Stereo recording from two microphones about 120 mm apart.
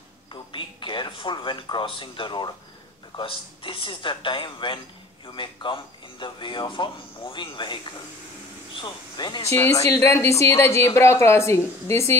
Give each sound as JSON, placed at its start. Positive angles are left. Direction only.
{"t": 0.3, "sound": "a sound", "side_deg": 45}
{"t": 3.2, "sound": "speech", "side_deg": 45}
{"t": 8.8, "sound": "speech", "side_deg": 40}
{"t": 9.4, "sound": "speech", "side_deg": 25}